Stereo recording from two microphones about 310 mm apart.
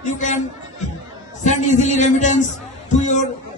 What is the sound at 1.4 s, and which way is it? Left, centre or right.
A man's voice, left.